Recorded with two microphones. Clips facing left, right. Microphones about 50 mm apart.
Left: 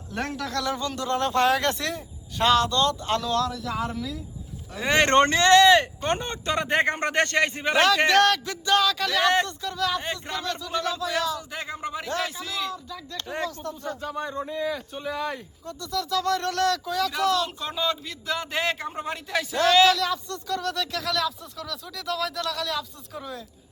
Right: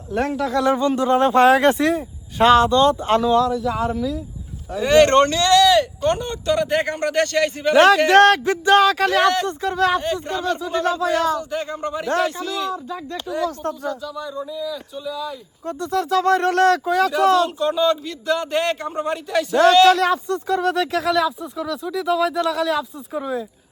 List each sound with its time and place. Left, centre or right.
0.1 s speech: centre
0.6 s speech: right
3.3 s speech: centre
4.8 s speech: centre
5.0 s speech: left
8.1 s speech: right
10.0 s speech: centre
10.3 s speech: right
11.3 s speech: centre
13.2 s speech: left
15.6 s speech: right
17.6 s speech: centre
19.9 s speech: right
21.2 s speech: centre